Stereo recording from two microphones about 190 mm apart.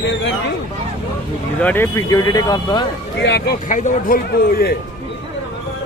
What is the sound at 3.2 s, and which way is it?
Speech, 60° left (ahead or behind).